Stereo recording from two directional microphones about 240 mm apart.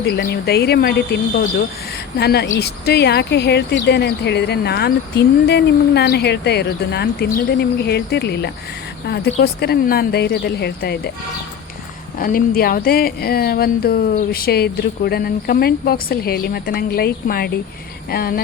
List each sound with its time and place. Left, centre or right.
0.2 s speech: left
12.2 s speech: left